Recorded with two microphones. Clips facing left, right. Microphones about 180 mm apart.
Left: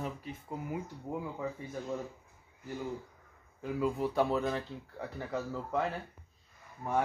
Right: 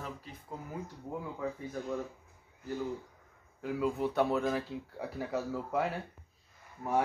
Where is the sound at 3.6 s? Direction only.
Centre (ahead or behind).